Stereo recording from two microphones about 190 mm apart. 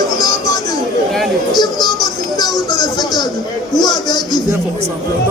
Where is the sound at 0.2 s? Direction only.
20° left (ahead or behind).